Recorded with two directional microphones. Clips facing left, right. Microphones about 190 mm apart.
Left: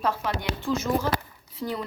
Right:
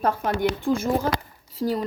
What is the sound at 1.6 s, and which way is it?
Speech, 40° right (ahead or behind).